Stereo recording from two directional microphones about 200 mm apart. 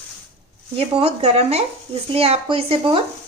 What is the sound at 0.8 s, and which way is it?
A child's voice, 30° right (ahead or behind).